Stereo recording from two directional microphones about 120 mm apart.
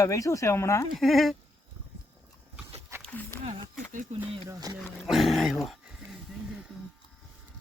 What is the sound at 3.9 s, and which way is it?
Speech, 90° right.